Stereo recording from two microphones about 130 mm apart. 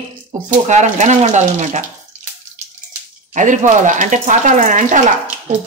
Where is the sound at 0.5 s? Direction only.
70° right (ahead or behind).